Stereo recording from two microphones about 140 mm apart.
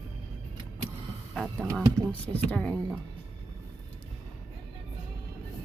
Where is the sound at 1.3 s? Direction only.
Centre (ahead or behind).